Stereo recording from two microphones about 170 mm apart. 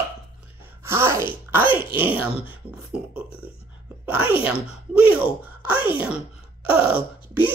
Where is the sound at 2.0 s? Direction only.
10° right (ahead or behind).